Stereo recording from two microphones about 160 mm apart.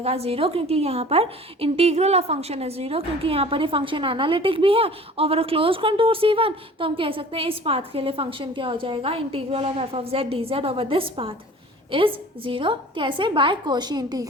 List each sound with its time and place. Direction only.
0.0 s a woman's voice: 40° right (ahead or behind); by 14.3 s 25° right (ahead or behind)